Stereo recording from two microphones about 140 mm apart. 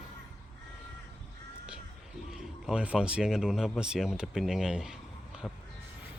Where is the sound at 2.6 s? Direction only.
5° right (ahead or behind).